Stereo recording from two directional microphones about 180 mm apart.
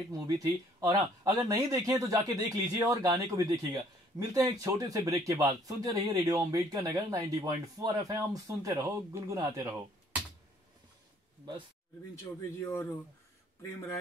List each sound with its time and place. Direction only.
0.1 s speech: 20° right (ahead or behind)
12.4 s speech: 15° left (ahead or behind)